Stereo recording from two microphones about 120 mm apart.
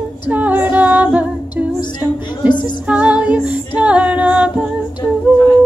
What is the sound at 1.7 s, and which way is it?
Music, 35° left (ahead or behind).